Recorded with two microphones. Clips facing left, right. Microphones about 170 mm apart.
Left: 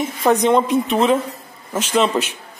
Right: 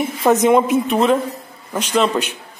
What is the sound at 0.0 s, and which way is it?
A man's voice, 5° right (ahead or behind).